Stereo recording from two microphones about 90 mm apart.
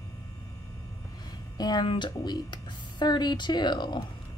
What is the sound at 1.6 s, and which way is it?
Speech, 55° left (ahead or behind).